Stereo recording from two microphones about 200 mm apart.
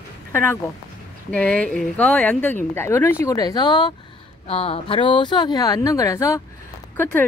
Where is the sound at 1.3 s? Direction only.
5° left (ahead or behind).